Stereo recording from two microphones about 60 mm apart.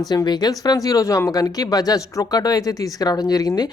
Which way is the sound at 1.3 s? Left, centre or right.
Left.